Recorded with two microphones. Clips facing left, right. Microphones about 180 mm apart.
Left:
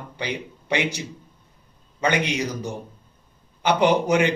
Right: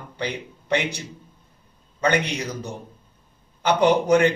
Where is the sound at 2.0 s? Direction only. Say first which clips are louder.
Right 1 dB; 10° left (ahead or behind).